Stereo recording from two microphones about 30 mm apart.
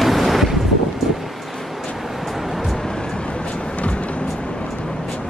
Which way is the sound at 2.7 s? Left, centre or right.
Left.